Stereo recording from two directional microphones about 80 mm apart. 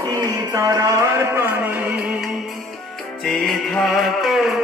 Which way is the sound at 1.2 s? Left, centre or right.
Right.